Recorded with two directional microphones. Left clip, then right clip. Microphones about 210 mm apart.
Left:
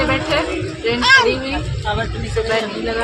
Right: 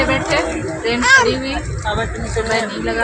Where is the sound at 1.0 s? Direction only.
35° left (ahead or behind).